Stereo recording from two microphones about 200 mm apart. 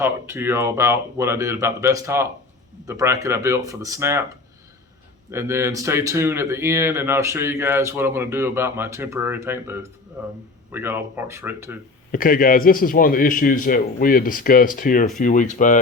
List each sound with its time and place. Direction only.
0.0 s speech: 10° right (ahead or behind)
5.3 s speech: 15° right (ahead or behind)
12.1 s a man's voice: 45° left (ahead or behind)